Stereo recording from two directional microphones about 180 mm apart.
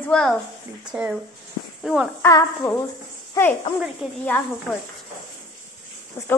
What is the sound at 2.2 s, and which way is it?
A woman's voice, 15° left (ahead or behind).